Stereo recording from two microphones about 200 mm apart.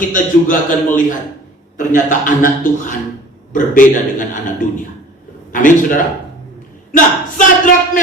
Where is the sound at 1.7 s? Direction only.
40° left (ahead or behind).